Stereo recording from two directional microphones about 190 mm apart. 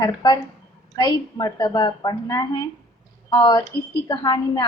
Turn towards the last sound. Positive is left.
turn(degrees=20)  # may be behind; listen again after turning